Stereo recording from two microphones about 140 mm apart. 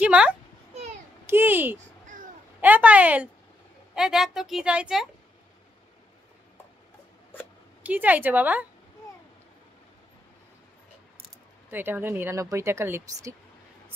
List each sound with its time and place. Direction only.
0.0 s a sound: 10° right (ahead or behind)
1.2 s a child's voice: 15° right (ahead or behind)
7.8 s speech: 10° right (ahead or behind)
11.7 s speech: 15° right (ahead or behind)